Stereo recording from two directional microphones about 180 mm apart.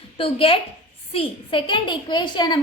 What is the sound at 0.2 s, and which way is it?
A woman's voice, 30° left (ahead or behind).